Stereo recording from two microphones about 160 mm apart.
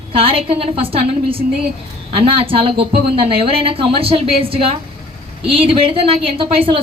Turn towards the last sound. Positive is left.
turn(degrees=-35)  # may be behind; listen again after turning